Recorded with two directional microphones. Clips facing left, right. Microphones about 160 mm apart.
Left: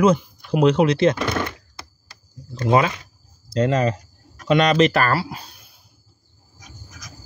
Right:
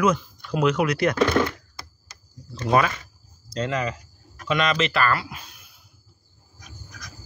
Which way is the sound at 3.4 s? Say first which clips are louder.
Left 7 dB; 30° left (ahead or behind).